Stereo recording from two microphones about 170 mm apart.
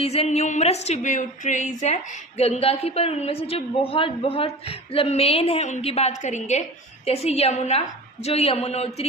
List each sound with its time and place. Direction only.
0.0 s a woman's voice: 35° left (ahead or behind)